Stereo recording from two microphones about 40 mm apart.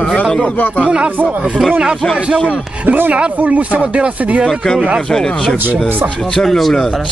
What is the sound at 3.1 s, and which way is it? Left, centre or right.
Speech, right.